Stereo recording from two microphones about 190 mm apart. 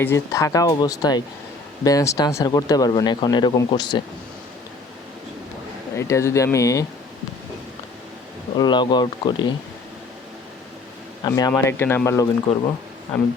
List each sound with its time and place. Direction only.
0.0 s speech: 15° left (ahead or behind)
6.0 s speech: 15° left (ahead or behind)
8.5 s speech: 25° left (ahead or behind)
11.2 s speech: 20° left (ahead or behind)
13.1 s speech: 5° left (ahead or behind)